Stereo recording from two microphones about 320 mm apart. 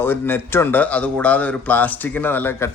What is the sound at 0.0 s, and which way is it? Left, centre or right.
A man's voice, centre.